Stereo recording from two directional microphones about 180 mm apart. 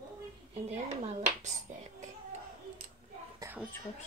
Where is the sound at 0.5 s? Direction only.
35° right (ahead or behind).